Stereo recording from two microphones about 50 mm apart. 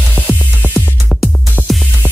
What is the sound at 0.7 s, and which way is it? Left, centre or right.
Music, centre.